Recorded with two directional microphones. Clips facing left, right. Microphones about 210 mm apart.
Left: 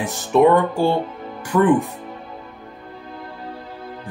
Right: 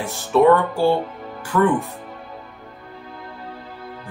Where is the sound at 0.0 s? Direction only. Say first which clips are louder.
Left 1 dB; 20° left (ahead or behind).